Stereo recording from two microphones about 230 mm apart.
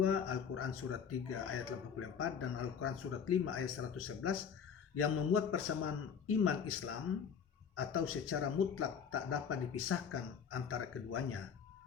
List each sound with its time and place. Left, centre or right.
0.0 s speech: left